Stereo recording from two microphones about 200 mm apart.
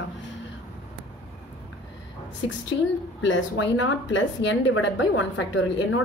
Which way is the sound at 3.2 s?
70° left (ahead or behind).